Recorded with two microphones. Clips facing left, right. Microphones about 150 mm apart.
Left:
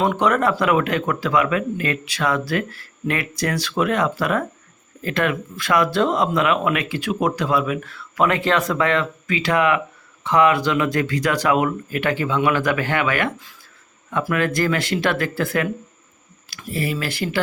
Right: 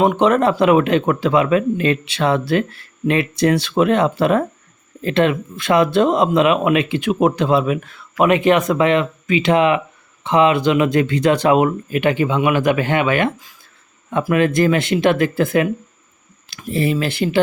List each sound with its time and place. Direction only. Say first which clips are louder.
0.0 s speech: right 4 dB; 20° right (ahead or behind)